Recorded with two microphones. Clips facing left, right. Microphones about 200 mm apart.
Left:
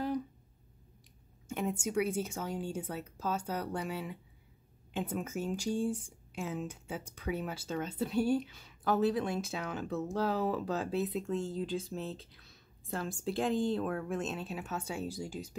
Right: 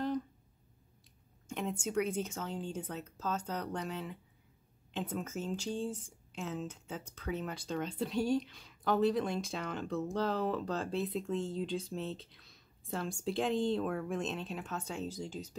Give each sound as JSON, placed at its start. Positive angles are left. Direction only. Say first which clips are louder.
{"t": 1.5, "sound": "speech", "louder": "left 2 dB", "side_deg": 5}